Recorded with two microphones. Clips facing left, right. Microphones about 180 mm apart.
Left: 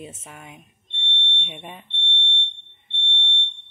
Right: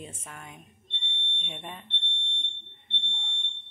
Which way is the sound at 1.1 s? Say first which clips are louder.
Left 9 dB; 5° right (ahead or behind).